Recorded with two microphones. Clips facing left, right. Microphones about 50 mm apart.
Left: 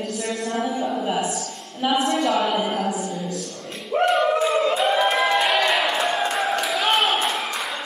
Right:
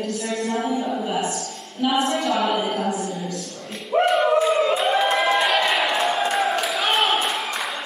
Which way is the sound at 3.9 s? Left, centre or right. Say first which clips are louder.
Right 1 dB; centre.